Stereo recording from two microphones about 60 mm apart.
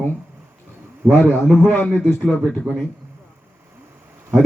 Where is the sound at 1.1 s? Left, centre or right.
Left.